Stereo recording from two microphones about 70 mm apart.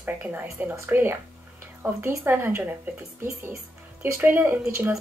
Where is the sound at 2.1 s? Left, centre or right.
Right.